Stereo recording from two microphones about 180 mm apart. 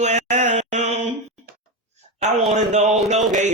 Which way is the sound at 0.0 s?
40° right (ahead or behind).